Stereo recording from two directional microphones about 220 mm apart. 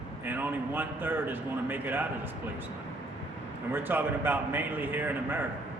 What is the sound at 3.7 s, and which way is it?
A man's voice, 10° right (ahead or behind).